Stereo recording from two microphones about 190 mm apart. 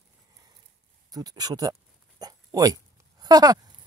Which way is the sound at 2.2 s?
20° right (ahead or behind).